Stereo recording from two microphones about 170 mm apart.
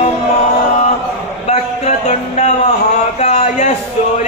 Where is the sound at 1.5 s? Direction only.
45° left (ahead or behind).